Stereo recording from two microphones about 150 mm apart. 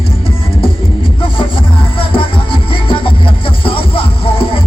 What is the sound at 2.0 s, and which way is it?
Music, 35° left (ahead or behind).